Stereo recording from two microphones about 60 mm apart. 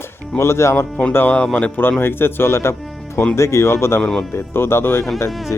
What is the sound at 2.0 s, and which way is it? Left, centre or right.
A man's voice, left.